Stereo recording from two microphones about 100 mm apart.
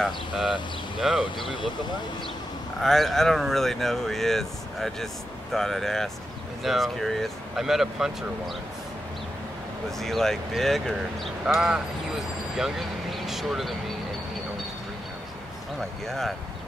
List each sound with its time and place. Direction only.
0.0 s speech: centre (ahead or behind)
1.4 s speech: 55° left (ahead or behind)
2.8 s speech: 5° left (ahead or behind)
9.8 s speech: 5° left (ahead or behind)
16.1 s speech: centre (ahead or behind)